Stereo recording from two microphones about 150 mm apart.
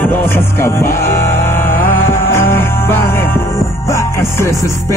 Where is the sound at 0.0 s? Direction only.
15° left (ahead or behind).